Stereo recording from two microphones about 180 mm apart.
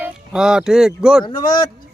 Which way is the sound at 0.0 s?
5° right (ahead or behind).